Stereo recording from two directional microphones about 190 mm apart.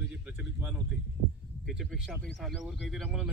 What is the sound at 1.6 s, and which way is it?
Speech, centre (ahead or behind).